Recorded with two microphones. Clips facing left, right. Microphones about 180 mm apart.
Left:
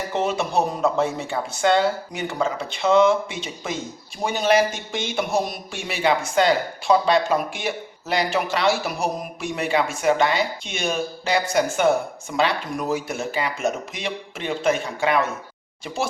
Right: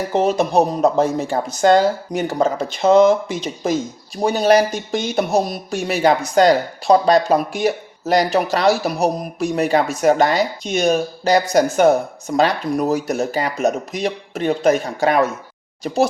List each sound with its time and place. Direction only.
0.1 s speech: 40° right (ahead or behind)